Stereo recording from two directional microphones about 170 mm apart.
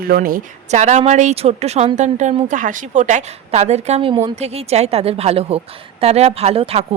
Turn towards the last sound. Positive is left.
turn(degrees=-35)  # may be behind; listen again after turning